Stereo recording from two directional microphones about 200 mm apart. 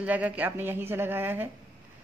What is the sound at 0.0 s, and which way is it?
Speech, 5° right (ahead or behind).